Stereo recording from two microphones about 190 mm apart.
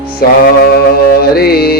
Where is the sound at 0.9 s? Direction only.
55° left (ahead or behind).